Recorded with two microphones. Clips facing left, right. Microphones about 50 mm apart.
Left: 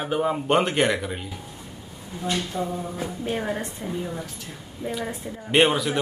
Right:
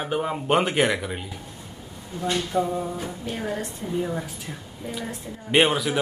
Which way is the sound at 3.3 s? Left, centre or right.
Left.